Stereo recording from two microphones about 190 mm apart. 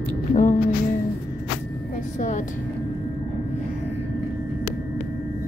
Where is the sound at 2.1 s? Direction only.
40° left (ahead or behind).